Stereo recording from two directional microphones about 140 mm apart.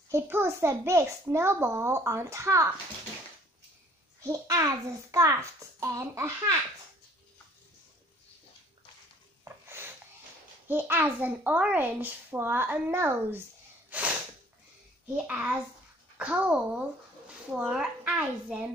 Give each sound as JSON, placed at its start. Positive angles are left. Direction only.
{"t": 0.1, "sound": "a child's voice", "side_deg": -15}
{"t": 4.2, "sound": "a child's voice", "side_deg": -25}
{"t": 9.4, "sound": "a sound", "side_deg": -15}
{"t": 10.7, "sound": "a child's voice", "side_deg": -15}
{"t": 13.8, "sound": "snort", "side_deg": -10}
{"t": 15.2, "sound": "a child's voice", "side_deg": -10}